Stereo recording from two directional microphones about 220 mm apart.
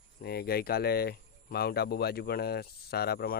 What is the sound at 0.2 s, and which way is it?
Speech, 45° left (ahead or behind).